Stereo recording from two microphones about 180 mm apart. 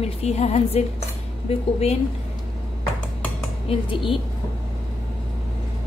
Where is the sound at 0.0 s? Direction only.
35° left (ahead or behind).